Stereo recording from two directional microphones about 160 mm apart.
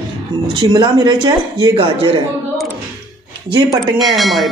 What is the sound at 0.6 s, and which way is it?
Speech, 30° right (ahead or behind).